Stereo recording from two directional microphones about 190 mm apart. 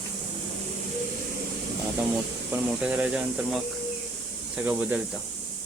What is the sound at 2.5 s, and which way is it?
Speech, 5° right (ahead or behind).